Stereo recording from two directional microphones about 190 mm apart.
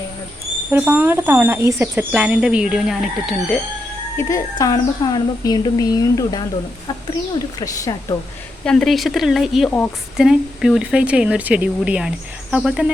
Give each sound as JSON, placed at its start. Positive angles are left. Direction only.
{"t": 0.7, "sound": "speech", "side_deg": -10}
{"t": 4.2, "sound": "a woman's voice", "side_deg": 15}
{"t": 8.6, "sound": "speech", "side_deg": 5}
{"t": 10.2, "sound": "speech", "side_deg": -5}